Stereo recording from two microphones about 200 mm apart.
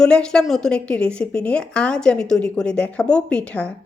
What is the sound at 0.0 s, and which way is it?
A woman's voice, 5° left (ahead or behind).